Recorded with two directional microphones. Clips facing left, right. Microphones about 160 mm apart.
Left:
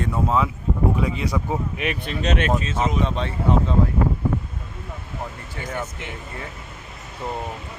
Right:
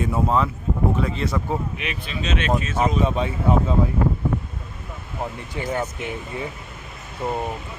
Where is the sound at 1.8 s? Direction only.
55° left (ahead or behind).